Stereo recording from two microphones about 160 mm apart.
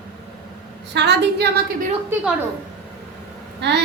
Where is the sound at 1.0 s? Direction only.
90° right.